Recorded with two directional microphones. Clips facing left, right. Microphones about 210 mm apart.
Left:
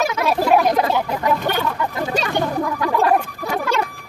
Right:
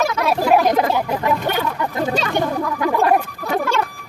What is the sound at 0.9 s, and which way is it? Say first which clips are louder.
Speech: even; 5° right (ahead or behind).